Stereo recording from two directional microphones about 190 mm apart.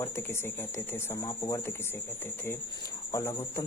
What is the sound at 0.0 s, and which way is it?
Speech, 15° left (ahead or behind).